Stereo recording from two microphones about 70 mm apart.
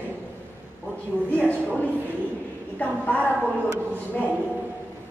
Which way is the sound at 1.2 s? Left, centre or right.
Left.